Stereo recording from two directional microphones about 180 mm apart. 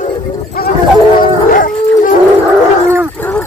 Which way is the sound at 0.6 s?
55° left (ahead or behind).